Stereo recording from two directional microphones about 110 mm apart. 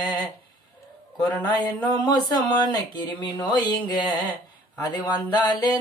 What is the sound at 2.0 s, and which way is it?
Speech, 40° left (ahead or behind).